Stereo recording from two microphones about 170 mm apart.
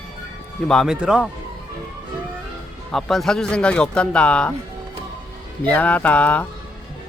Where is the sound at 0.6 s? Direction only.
Centre (ahead or behind).